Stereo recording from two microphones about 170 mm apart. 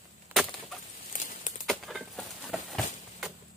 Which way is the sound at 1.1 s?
50° left (ahead or behind).